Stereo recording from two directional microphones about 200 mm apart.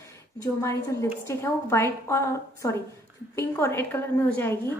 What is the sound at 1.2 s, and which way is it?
A woman's voice, 15° left (ahead or behind).